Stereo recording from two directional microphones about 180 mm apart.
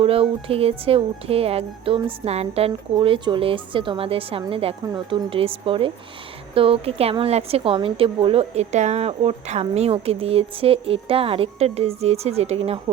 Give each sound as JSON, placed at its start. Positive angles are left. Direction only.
{"t": 0.0, "sound": "a woman's voice", "side_deg": -30}